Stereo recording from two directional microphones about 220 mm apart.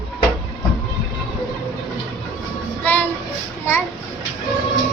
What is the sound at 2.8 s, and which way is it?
Music, 10° left (ahead or behind).